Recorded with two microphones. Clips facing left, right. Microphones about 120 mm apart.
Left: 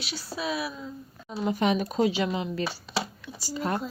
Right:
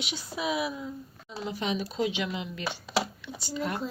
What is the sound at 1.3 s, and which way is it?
Speech, 50° left (ahead or behind).